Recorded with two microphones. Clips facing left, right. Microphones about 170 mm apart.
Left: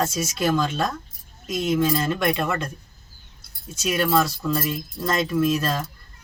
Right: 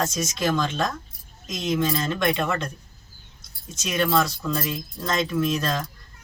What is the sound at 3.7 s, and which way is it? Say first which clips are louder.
Speech: left 1 dB; 5° left (ahead or behind).